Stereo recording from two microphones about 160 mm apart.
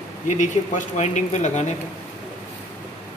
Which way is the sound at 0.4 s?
45° left (ahead or behind).